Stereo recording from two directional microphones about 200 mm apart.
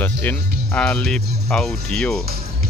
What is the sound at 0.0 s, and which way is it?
Speech, 10° left (ahead or behind).